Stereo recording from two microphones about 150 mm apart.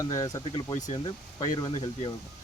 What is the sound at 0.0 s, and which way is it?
Speech, 25° left (ahead or behind).